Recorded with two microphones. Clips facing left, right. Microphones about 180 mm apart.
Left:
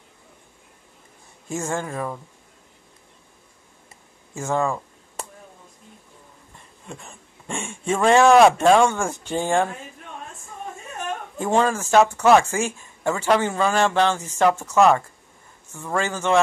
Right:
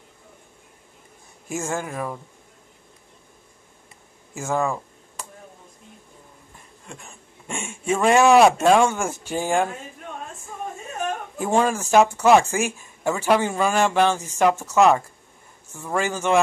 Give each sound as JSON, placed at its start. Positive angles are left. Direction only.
{"t": 1.5, "sound": "speech", "side_deg": -5}
{"t": 4.4, "sound": "speech", "side_deg": -5}
{"t": 6.9, "sound": "speech", "side_deg": 0}
{"t": 11.3, "sound": "speech", "side_deg": -10}